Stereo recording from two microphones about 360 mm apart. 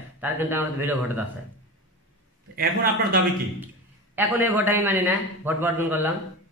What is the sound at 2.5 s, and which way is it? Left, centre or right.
Speech, right.